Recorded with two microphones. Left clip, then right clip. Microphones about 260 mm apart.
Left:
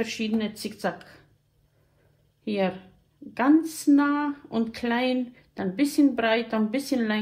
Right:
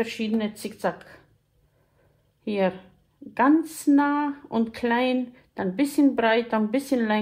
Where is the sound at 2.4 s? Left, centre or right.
Right.